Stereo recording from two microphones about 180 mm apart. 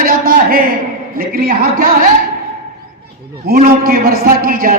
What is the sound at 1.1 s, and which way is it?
Speech, 55° right (ahead or behind).